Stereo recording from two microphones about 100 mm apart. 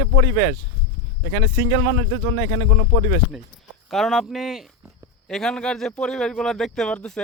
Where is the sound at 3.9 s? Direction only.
Centre (ahead or behind).